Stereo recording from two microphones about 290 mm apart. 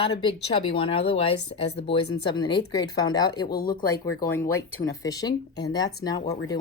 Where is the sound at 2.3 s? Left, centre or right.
Centre.